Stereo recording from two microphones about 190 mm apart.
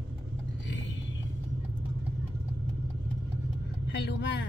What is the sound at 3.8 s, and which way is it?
Vehicle, 60° left (ahead or behind).